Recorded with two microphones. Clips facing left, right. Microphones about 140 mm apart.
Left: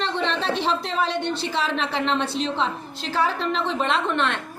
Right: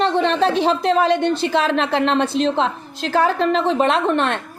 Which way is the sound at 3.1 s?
50° right (ahead or behind).